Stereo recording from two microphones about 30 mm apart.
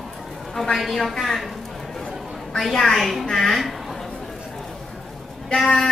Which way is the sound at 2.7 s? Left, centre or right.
Centre.